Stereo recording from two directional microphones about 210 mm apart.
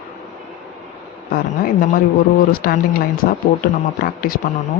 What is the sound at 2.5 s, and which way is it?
Speech, 45° left (ahead or behind).